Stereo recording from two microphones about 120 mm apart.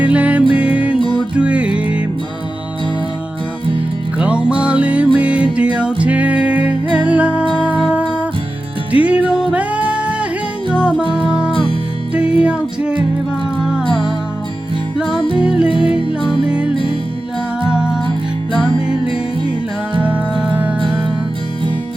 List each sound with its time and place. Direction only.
0.0 s music: 10° right (ahead or behind)
4.2 s music: 10° right (ahead or behind)
11.0 s music: 45° right (ahead or behind)
11.3 s music: 5° right (ahead or behind)
15.4 s music: 10° right (ahead or behind)
17.7 s music: 5° right (ahead or behind)
20.0 s music: 10° right (ahead or behind)